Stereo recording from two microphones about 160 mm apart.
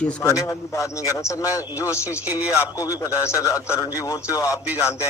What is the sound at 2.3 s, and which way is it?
Speech, 10° right (ahead or behind).